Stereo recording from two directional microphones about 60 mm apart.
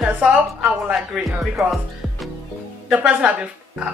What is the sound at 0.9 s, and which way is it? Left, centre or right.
Speech, centre.